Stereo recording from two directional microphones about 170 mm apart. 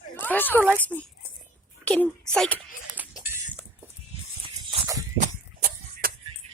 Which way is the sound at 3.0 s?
10° right (ahead or behind).